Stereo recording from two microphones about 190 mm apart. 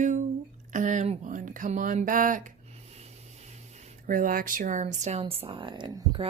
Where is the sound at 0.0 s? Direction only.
40° right (ahead or behind).